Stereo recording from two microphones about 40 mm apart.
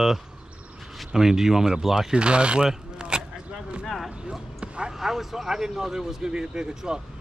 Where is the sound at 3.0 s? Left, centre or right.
Right.